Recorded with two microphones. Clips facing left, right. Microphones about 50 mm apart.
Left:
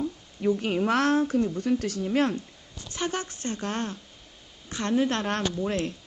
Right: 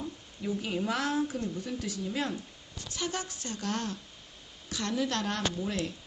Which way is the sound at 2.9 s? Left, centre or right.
Left.